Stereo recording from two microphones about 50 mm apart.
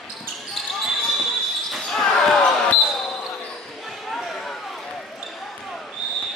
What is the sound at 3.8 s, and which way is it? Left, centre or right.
Basketball bounce, centre.